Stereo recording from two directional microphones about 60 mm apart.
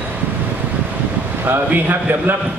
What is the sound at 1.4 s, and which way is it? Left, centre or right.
Speech, right.